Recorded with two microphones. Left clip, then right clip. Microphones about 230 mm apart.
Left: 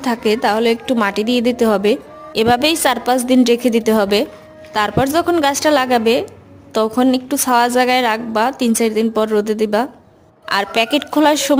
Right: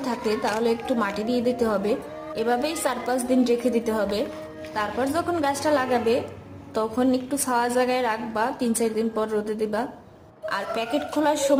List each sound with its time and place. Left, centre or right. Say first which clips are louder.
0.0 s a woman's voice: left 9 dB; left